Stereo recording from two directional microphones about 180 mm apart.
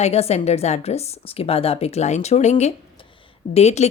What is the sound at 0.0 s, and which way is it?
A woman's voice, 35° left (ahead or behind).